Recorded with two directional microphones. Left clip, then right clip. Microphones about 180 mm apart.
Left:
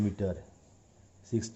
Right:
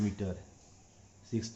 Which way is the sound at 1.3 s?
65° left (ahead or behind).